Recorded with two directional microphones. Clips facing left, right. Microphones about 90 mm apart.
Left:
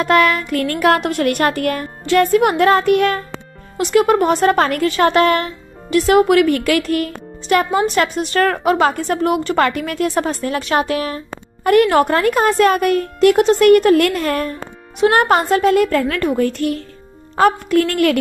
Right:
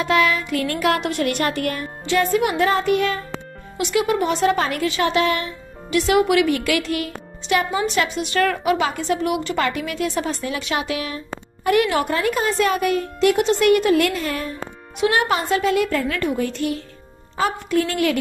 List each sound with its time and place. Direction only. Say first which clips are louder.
0.0 s speech: left 4 dB; 50° left (ahead or behind)
3.7 s a woman's voice: left 6 dB; 45° left (ahead or behind)